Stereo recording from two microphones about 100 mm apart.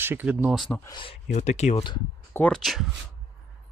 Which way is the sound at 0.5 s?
Centre (ahead or behind).